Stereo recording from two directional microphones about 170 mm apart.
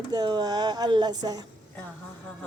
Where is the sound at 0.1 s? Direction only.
25° right (ahead or behind).